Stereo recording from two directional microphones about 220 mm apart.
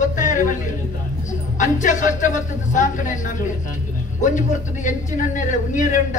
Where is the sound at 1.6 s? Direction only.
35° left (ahead or behind).